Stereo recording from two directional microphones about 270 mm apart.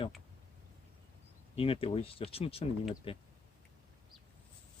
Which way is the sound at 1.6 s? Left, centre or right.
Left.